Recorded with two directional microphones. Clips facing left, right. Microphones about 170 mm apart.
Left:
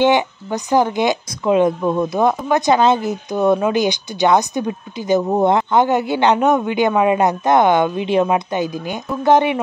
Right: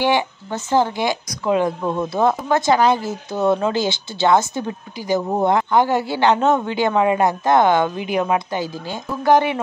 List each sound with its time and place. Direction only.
0.0 s speech: 15° left (ahead or behind)